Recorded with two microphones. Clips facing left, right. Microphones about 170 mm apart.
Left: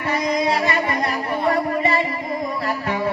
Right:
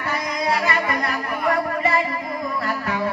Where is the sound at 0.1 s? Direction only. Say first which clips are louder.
Left 4 dB; 25° left (ahead or behind).